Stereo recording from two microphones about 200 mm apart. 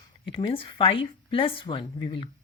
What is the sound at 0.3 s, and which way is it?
A woman's voice, 25° left (ahead or behind).